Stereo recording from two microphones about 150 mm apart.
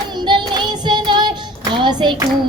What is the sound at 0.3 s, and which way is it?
Child singing, 30° right (ahead or behind).